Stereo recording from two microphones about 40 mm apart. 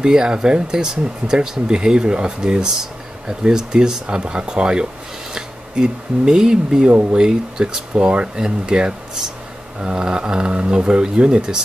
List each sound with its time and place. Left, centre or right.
0.0 s speech: right
2.8 s speech: centre